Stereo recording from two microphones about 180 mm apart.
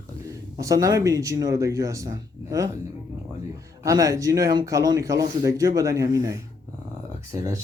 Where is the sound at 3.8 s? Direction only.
20° right (ahead or behind).